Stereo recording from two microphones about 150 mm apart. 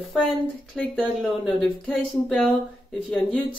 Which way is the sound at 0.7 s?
Centre (ahead or behind).